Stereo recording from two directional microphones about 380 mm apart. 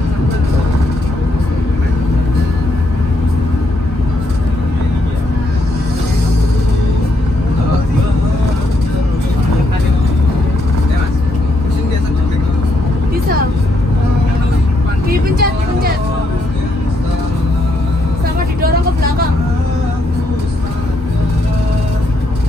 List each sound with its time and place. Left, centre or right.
15.0 s vehicle: right